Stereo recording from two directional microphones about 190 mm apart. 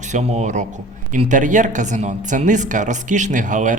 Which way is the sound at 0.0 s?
35° right (ahead or behind).